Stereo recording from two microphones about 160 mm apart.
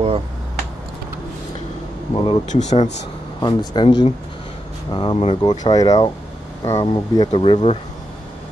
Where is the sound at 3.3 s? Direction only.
25° left (ahead or behind).